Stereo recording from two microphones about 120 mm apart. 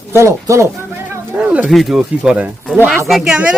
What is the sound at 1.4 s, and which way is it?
Speech, 10° right (ahead or behind).